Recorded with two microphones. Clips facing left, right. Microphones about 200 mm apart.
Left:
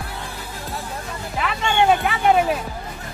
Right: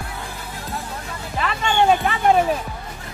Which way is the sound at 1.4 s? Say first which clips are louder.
Even; 5° left (ahead or behind).